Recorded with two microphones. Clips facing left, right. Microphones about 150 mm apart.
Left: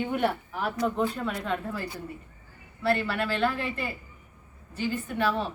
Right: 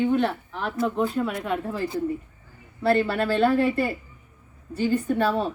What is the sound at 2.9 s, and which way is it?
Speech, 35° right (ahead or behind).